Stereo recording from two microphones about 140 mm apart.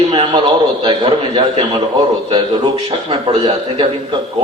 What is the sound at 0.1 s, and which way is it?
A man's voice, 35° right (ahead or behind).